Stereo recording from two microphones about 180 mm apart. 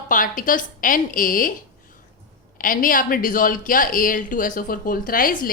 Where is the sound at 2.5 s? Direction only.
50° left (ahead or behind).